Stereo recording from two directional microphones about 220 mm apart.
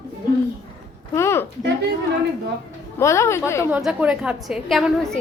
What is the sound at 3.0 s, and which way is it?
Speech, 15° left (ahead or behind).